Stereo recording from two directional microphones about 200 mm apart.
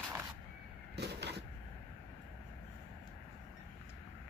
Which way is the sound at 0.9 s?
55° right (ahead or behind).